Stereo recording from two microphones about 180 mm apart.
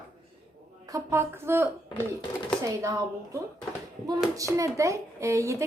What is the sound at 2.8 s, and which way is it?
Speech, 20° right (ahead or behind).